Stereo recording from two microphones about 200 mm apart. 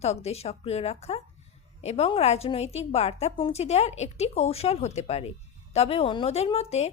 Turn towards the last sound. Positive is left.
turn(degrees=30)  # may be behind; listen again after turning